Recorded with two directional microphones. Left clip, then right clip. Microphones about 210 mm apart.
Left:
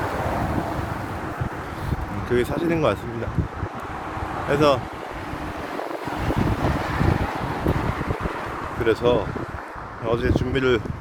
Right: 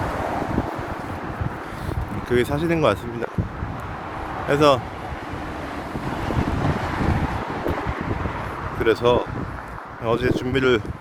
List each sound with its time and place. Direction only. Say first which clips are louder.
2.3 s speech: right 1 dB; 15° right (ahead or behind)
4.4 s speech: right 2 dB; 15° right (ahead or behind)
7.5 s boat: even; 55° left (ahead or behind)
8.8 s speech: right 2 dB; 15° right (ahead or behind)